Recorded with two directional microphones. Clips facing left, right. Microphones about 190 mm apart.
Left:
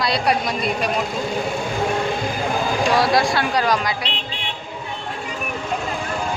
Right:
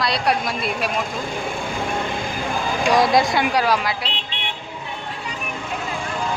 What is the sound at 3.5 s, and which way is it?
Speech, 5° right (ahead or behind).